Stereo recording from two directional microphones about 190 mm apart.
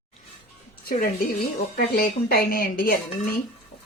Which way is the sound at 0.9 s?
50° left (ahead or behind).